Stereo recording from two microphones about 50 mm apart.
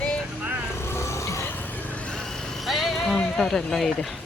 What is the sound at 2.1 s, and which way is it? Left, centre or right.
Vehicle, centre.